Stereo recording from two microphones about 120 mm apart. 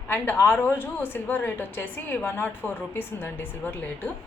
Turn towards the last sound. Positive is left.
turn(degrees=15)  # may be behind; listen again after turning